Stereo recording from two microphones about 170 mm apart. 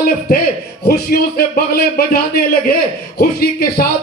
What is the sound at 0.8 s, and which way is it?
A man's voice, 65° left (ahead or behind).